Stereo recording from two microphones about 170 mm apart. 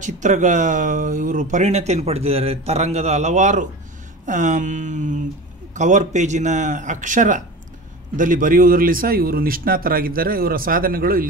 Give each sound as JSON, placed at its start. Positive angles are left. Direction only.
{"t": 0.0, "sound": "speech", "side_deg": -45}